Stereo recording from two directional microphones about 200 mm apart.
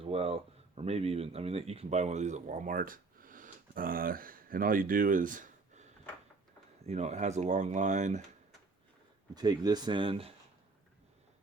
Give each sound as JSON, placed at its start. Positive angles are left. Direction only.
{"t": 0.0, "sound": "speech", "side_deg": -30}
{"t": 9.3, "sound": "speech", "side_deg": -20}